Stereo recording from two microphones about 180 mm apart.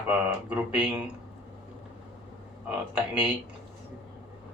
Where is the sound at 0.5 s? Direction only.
5° right (ahead or behind).